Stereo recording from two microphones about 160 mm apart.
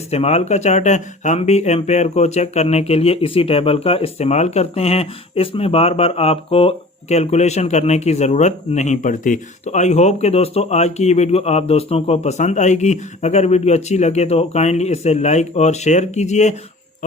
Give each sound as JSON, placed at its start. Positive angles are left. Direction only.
{"t": 0.1, "sound": "speech", "side_deg": 40}